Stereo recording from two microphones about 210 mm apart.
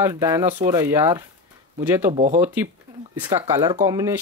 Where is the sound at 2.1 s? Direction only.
30° right (ahead or behind).